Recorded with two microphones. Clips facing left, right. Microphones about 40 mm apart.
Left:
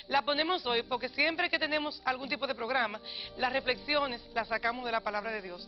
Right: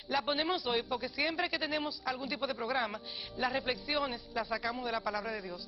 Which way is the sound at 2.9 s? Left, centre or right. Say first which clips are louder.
Left 1 dB; left.